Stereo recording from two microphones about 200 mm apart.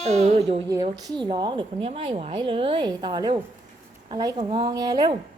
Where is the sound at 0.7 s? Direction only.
20° right (ahead or behind).